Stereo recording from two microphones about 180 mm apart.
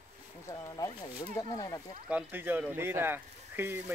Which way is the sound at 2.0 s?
10° right (ahead or behind).